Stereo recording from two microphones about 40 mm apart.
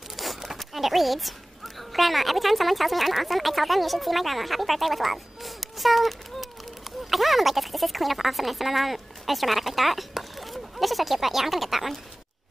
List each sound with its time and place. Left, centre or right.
0.1 s zipper: centre
1.8 s speech: centre